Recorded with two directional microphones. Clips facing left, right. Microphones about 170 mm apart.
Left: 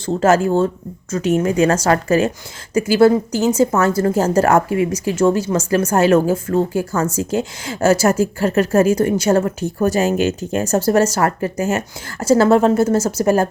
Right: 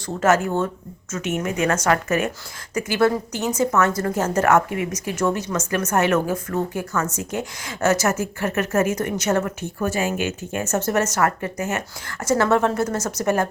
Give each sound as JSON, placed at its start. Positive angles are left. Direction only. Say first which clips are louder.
{"t": 0.0, "sound": "a woman's voice", "louder": "left 5 dB", "side_deg": 30}